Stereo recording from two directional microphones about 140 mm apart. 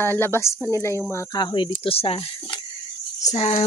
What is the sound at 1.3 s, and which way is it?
Speech, 35° left (ahead or behind).